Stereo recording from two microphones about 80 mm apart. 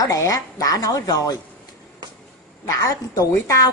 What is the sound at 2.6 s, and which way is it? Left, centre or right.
A woman's voice, left.